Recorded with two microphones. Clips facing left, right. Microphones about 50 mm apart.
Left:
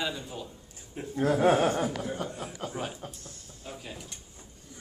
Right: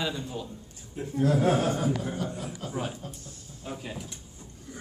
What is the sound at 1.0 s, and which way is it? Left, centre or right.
Speech, left.